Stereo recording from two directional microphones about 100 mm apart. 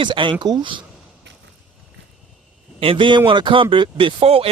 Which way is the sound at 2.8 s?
60° right (ahead or behind).